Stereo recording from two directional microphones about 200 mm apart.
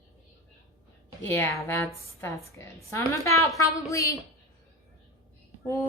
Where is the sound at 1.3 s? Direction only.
10° left (ahead or behind).